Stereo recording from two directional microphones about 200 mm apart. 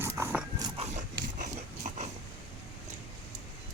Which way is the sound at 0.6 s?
30° right (ahead or behind).